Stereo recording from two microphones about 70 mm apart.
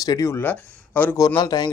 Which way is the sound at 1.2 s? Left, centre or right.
Left.